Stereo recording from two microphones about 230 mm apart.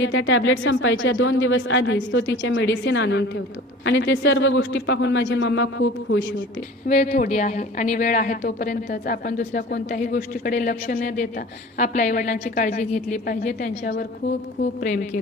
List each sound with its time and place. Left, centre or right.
0.0 s a man's voice: left
6.9 s a woman's voice: left